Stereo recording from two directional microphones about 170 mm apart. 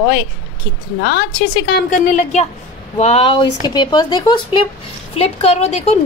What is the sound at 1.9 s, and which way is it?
A woman's voice, 45° left (ahead or behind).